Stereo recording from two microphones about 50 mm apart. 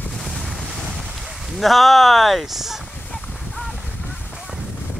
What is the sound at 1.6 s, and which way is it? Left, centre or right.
Speech, centre.